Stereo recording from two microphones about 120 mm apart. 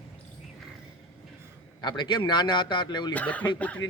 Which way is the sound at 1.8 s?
40° left (ahead or behind).